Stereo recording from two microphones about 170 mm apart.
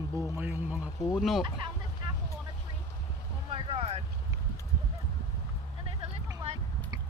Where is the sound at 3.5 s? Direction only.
35° right (ahead or behind).